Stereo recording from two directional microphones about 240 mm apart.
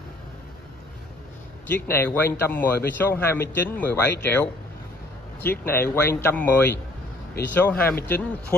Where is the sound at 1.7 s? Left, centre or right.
Centre.